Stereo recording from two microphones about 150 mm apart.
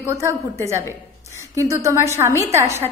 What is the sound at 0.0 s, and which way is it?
A woman's voice, 20° right (ahead or behind).